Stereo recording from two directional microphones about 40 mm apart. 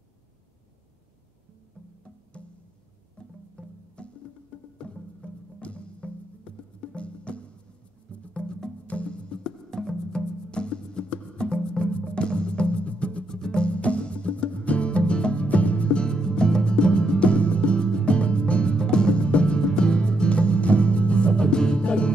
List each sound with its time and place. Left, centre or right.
3.2 s music: left
9.4 s music: centre